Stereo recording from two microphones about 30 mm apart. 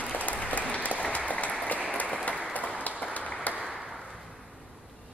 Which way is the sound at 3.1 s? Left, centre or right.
Left.